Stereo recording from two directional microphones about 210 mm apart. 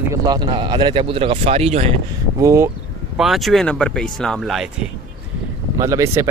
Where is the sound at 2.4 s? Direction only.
15° right (ahead or behind).